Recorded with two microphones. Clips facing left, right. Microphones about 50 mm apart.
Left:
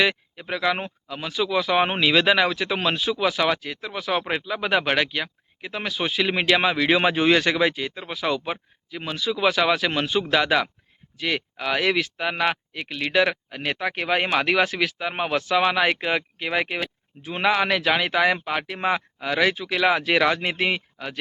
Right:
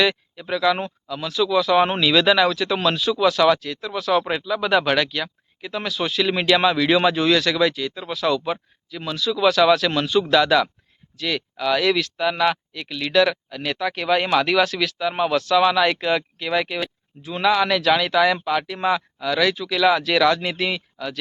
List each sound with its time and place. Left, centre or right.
0.0 s speech: centre